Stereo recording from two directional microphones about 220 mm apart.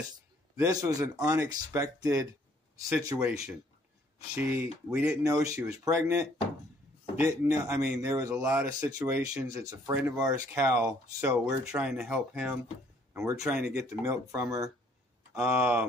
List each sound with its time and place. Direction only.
0.6 s speech: 15° right (ahead or behind)
13.2 s speech: 15° right (ahead or behind)
13.5 s speech: 5° right (ahead or behind)